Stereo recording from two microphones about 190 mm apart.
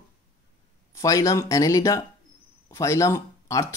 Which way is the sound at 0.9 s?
15° left (ahead or behind).